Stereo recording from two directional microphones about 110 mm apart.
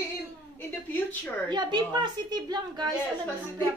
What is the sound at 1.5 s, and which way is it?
Speech, 40° right (ahead or behind).